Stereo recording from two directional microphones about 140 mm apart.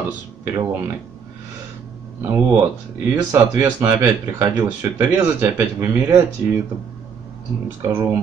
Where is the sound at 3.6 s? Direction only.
15° right (ahead or behind).